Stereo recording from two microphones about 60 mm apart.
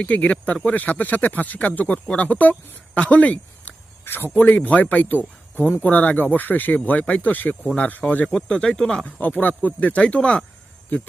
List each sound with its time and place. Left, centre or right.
0.0 s speech: left
4.0 s speech: left; by 9.0 s centre
9.0 s speech: left